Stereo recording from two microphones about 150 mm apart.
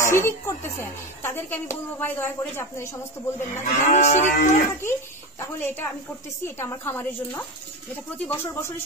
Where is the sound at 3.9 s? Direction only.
50° left (ahead or behind).